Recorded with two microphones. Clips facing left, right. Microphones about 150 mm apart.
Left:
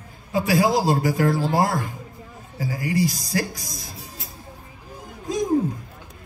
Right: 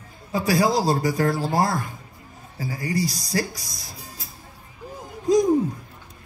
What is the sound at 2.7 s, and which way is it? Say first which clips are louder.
A man's voice: left 3 dB; 35° right (ahead or behind).